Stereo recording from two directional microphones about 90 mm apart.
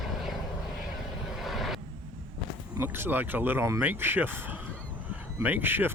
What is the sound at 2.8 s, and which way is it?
Speech, 25° right (ahead or behind).